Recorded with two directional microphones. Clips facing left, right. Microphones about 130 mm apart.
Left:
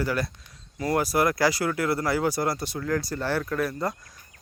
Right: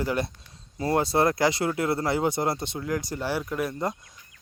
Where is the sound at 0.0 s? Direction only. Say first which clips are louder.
Even; 20° right (ahead or behind).